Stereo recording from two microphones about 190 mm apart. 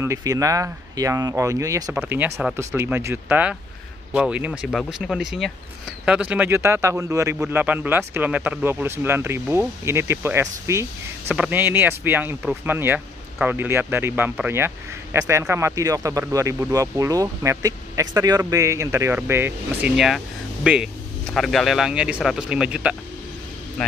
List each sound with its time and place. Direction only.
0.0 s a man's voice: 15° right (ahead or behind)